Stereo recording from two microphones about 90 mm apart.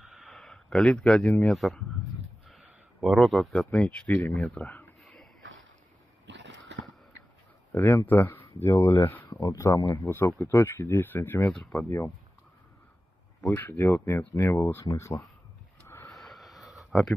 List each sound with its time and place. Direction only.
0.0 s a sound: 5° right (ahead or behind)
1.4 s speech: centre (ahead or behind)
2.4 s a sound: centre (ahead or behind)
3.7 s speech: 10° left (ahead or behind)
7.7 s speech: 30° left (ahead or behind)
9.8 s speech: 50° left (ahead or behind)
10.0 s speech: 30° left (ahead or behind)
11.5 s speech: 5° left (ahead or behind)
13.6 s speech: 25° left (ahead or behind)
16.1 s a sound: centre (ahead or behind)